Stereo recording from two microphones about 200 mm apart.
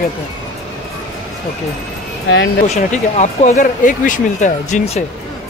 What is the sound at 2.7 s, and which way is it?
Speech, 35° left (ahead or behind).